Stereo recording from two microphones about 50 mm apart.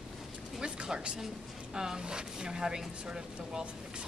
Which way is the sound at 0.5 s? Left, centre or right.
Centre.